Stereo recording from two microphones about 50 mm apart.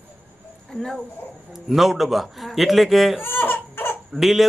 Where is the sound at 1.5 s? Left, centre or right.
Centre.